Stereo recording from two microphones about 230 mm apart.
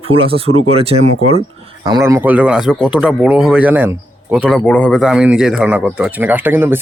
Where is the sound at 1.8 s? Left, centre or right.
Centre.